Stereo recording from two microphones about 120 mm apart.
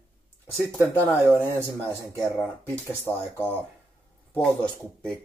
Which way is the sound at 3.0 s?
15° left (ahead or behind).